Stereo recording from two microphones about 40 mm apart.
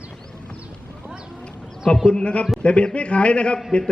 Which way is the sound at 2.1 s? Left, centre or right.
Left.